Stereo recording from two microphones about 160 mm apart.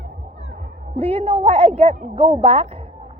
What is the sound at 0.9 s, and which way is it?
A woman's voice, 40° right (ahead or behind).